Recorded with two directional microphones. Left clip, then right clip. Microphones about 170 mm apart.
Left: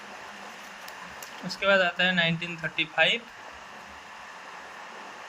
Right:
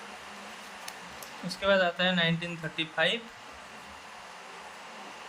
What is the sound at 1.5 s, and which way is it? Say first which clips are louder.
Speech: left 3 dB; centre (ahead or behind).